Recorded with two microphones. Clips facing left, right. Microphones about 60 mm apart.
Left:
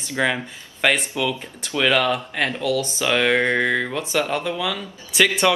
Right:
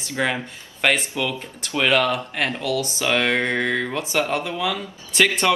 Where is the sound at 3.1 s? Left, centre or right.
Centre.